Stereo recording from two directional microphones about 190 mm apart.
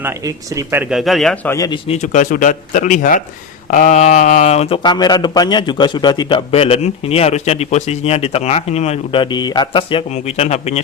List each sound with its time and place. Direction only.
0.0 s speech: 15° right (ahead or behind)
1.5 s speech: 20° left (ahead or behind)
1.9 s speech: 40° left (ahead or behind)